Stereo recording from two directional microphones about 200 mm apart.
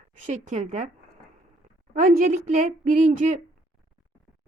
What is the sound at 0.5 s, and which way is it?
Speech, 35° right (ahead or behind).